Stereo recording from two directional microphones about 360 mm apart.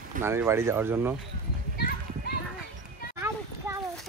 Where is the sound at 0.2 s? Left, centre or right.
Centre.